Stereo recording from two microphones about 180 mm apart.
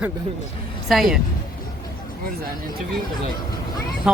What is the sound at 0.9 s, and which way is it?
Speech, centre (ahead or behind).